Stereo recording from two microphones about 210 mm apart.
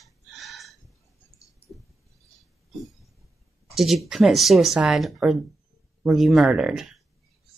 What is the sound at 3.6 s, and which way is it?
Speech, centre (ahead or behind).